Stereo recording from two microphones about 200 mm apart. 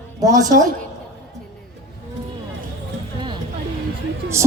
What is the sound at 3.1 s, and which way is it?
Music, 25° right (ahead or behind).